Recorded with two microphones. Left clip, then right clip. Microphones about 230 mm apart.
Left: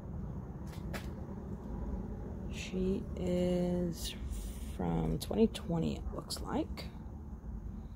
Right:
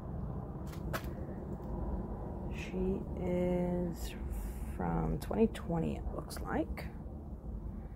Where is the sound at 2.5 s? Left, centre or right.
Left.